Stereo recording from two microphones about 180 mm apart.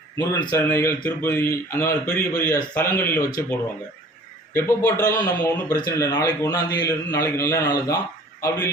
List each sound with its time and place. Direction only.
0.2 s a man's voice: 25° left (ahead or behind)
4.5 s a man's voice: 15° left (ahead or behind)